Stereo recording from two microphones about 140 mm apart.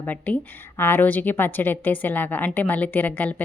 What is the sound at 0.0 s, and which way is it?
A woman's voice, 10° left (ahead or behind).